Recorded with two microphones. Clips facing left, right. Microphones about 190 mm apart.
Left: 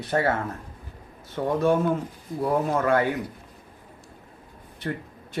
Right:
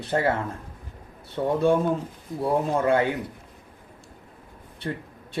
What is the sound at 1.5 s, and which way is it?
A man's voice, 25° right (ahead or behind).